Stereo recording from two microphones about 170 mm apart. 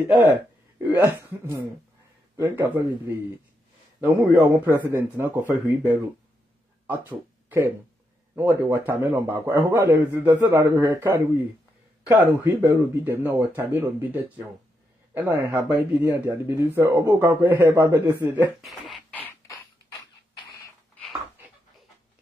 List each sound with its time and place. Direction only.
0.8 s a man's voice: 10° right (ahead or behind)
4.0 s a man's voice: 10° right (ahead or behind)
7.1 s a man's voice: 10° right (ahead or behind)
18.6 s beatboxing: centre (ahead or behind)